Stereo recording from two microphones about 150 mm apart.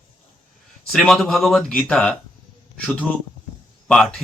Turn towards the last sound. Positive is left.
turn(degrees=5)  # may be behind; listen again after turning